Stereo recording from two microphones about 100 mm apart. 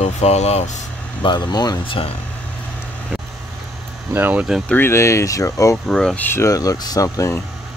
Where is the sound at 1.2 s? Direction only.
45° left (ahead or behind).